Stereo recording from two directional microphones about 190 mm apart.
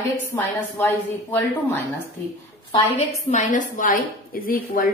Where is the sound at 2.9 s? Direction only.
40° left (ahead or behind).